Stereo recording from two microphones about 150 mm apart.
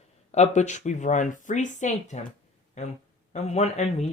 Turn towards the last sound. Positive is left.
turn(degrees=45)  # may be behind; listen again after turning